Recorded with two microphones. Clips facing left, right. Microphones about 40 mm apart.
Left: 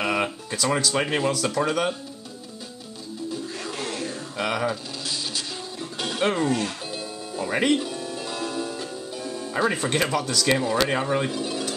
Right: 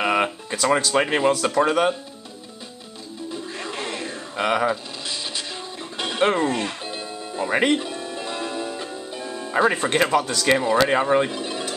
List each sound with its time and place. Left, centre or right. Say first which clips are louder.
0.0 s speech: right 4 dB; centre
3.5 s a sound: right 1 dB; centre
5.8 s music: right 4 dB; centre